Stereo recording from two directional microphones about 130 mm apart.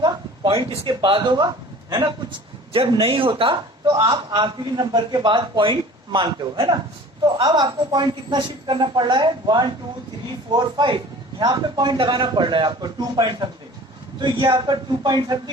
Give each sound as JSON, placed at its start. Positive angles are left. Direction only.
{"t": 0.0, "sound": "a man's voice", "side_deg": -35}
{"t": 3.8, "sound": "a man's voice", "side_deg": -25}